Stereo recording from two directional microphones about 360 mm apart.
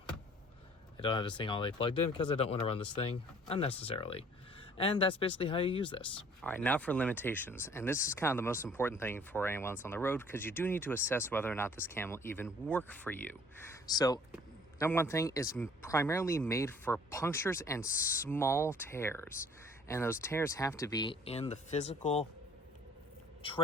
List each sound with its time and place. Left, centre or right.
0.9 s speech: centre
23.4 s speech: centre